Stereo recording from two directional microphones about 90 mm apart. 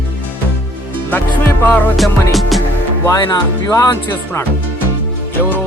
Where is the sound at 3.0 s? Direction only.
40° left (ahead or behind).